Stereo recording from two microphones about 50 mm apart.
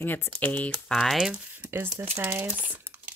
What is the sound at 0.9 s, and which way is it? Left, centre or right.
Speech, centre.